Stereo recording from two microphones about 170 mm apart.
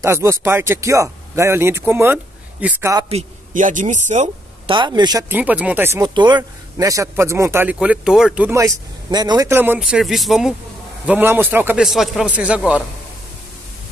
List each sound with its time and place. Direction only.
0.0 s a man's voice: 15° right (ahead or behind)
3.1 s speech: 45° right (ahead or behind)
4.6 s speech: 25° right (ahead or behind)
5.3 s a man's voice: 10° right (ahead or behind)
6.0 s a man's voice: 25° right (ahead or behind); by 8.5 s 5° right (ahead or behind)
8.5 s a man's voice: 15° right (ahead or behind); by 10.5 s centre (ahead or behind)
11.1 s a man's voice: 10° right (ahead or behind)